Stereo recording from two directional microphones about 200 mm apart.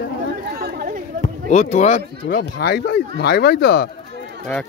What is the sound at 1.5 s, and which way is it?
Speech, 35° left (ahead or behind).